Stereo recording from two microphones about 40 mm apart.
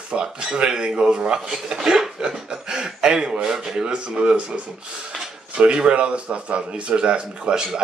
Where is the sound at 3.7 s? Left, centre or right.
Right.